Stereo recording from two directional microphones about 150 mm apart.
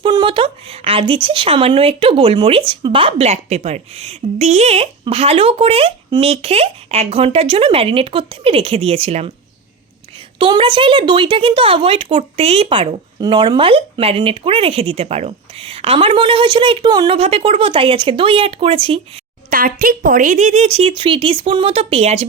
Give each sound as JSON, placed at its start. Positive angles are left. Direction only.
{"t": 0.0, "sound": "speech", "side_deg": -30}
{"t": 10.3, "sound": "speech", "side_deg": -35}
{"t": 17.2, "sound": "speech", "side_deg": -40}
{"t": 19.5, "sound": "speech", "side_deg": -70}